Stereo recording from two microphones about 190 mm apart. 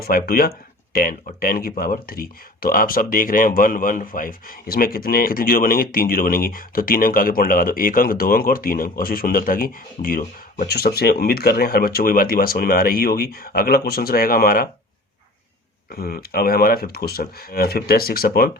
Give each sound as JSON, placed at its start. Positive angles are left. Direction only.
{"t": 0.0, "sound": "speech", "side_deg": 50}
{"t": 15.9, "sound": "speech", "side_deg": 50}